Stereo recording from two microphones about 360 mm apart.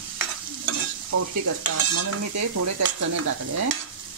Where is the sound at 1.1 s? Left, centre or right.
Right.